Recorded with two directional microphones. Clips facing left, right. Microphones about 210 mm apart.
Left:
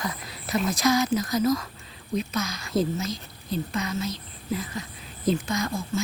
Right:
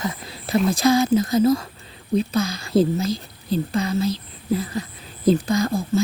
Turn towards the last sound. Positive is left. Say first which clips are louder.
# right 7 dB
turn(degrees=-35)  # may be behind; listen again after turning